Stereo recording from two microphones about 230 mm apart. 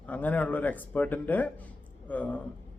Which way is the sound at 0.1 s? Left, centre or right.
Centre.